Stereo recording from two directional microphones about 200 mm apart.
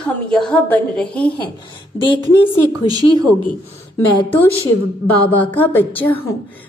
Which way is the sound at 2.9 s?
20° right (ahead or behind).